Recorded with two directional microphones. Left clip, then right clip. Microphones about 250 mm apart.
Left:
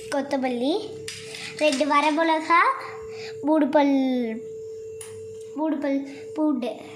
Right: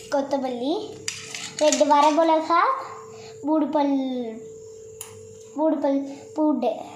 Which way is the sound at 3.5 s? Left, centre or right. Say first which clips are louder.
Left 2 dB; left.